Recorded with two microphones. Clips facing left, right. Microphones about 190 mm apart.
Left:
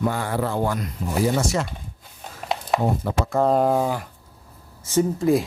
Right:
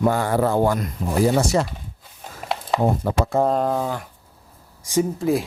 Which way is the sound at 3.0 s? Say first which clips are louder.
Right 2 dB; 45° right (ahead or behind).